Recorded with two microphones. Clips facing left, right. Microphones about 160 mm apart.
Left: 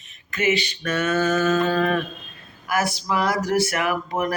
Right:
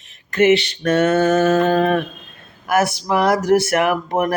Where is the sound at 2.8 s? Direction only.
60° right (ahead or behind).